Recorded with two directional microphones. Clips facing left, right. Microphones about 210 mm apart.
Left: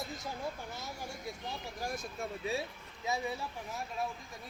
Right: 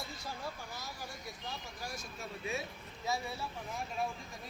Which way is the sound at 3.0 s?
15° left (ahead or behind).